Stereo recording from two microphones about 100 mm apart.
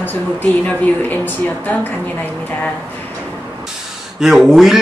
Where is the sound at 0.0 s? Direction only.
20° left (ahead or behind).